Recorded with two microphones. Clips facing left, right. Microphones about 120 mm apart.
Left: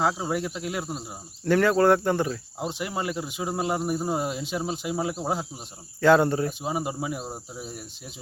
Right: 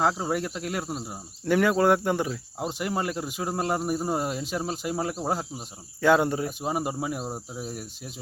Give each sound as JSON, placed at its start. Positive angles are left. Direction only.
{"t": 0.0, "sound": "speech", "side_deg": 0}
{"t": 6.0, "sound": "speech", "side_deg": -10}